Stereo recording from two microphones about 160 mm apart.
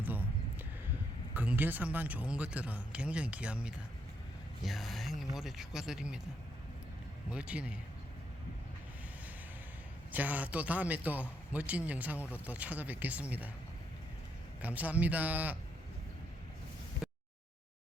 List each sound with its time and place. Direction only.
0.0 s a sound: 10° right (ahead or behind)
1.3 s a man's voice: 10° right (ahead or behind)
7.3 s a man's voice: 5° right (ahead or behind)
10.1 s a man's voice: 10° right (ahead or behind)
14.6 s a man's voice: 10° right (ahead or behind)
17.0 s a sound: 5° right (ahead or behind)